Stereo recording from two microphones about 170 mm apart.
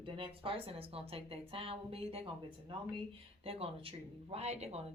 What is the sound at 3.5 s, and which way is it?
A woman's voice, 35° right (ahead or behind).